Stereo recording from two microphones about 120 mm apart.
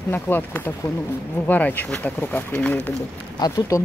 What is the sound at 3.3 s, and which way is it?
Speech, 35° left (ahead or behind).